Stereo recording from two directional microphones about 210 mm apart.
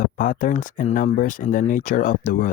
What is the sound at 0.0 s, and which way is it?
Speech, 40° left (ahead or behind).